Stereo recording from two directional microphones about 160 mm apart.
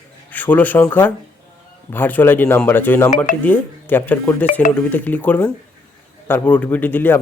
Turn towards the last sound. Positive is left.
turn(degrees=10)  # may be behind; listen again after turning